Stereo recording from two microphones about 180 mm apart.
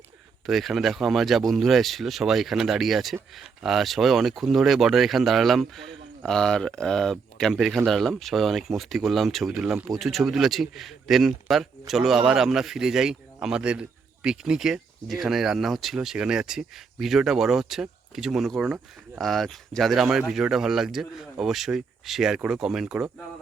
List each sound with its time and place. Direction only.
0.4 s speech: centre (ahead or behind)